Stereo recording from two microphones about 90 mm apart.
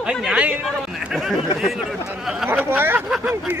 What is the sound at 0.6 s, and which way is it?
Speech, 5° right (ahead or behind).